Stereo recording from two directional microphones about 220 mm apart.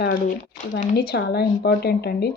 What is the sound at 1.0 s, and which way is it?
Speech, 45° left (ahead or behind).